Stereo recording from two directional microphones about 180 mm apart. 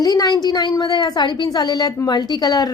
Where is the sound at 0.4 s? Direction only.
20° left (ahead or behind).